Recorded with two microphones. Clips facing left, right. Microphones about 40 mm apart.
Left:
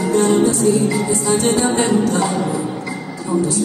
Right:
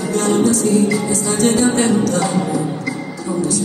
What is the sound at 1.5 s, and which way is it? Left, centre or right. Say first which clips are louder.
Music: right 2 dB; centre.